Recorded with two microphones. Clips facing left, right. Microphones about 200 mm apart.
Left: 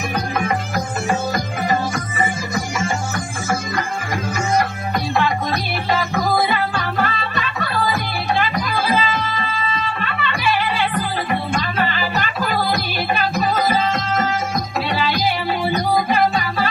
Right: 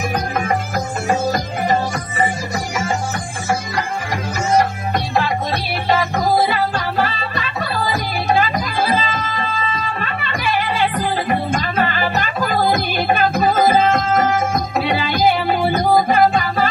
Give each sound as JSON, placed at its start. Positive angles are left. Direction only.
{"t": 0.1, "sound": "music", "side_deg": -40}
{"t": 4.5, "sound": "music", "side_deg": -35}
{"t": 10.8, "sound": "music", "side_deg": -40}